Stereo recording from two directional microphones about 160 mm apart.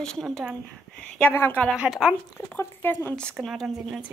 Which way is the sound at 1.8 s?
5° right (ahead or behind).